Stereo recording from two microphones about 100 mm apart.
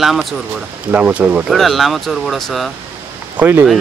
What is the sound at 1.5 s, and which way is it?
Speech, centre (ahead or behind).